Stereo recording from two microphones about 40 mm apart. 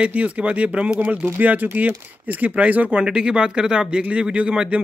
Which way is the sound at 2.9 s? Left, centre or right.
Right.